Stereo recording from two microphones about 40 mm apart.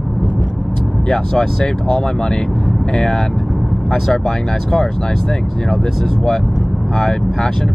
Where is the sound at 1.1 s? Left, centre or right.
Centre.